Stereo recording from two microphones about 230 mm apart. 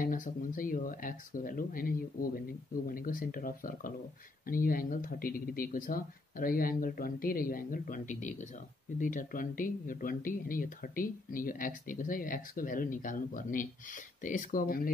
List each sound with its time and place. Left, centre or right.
0.0 s speech: left